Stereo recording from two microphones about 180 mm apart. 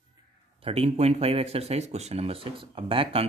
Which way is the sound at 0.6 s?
35° right (ahead or behind).